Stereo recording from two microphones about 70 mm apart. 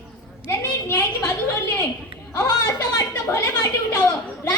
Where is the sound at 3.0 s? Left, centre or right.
Left.